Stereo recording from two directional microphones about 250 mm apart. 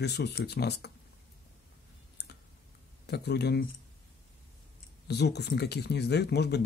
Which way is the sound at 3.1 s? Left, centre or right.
Left.